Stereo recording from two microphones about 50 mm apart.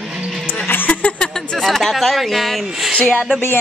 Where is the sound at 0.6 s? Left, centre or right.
Left.